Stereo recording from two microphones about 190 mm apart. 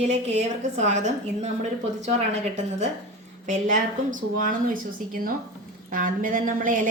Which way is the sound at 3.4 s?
40° right (ahead or behind).